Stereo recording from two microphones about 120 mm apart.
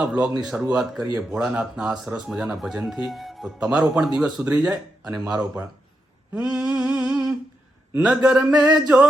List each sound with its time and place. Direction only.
0.0 s speech: 5° right (ahead or behind)
6.7 s a sound: 5° right (ahead or behind)
7.9 s speech: 10° right (ahead or behind)